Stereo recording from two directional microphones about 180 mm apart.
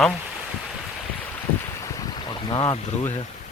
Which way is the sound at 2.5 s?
20° left (ahead or behind).